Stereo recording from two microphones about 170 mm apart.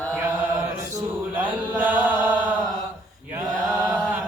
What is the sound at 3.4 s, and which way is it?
Mantra, 20° right (ahead or behind).